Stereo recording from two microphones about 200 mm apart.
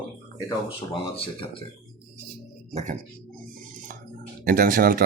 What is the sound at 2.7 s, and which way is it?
Speech, 35° right (ahead or behind).